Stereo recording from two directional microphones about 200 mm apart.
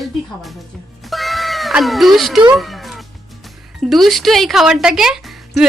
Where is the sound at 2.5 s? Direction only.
Centre (ahead or behind).